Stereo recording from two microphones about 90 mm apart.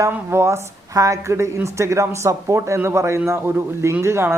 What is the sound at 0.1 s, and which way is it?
A woman's voice, 25° right (ahead or behind).